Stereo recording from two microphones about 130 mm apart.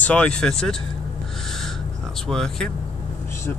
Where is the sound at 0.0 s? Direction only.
10° left (ahead or behind).